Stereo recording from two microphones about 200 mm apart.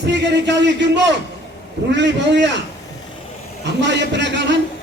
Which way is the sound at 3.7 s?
60° right (ahead or behind).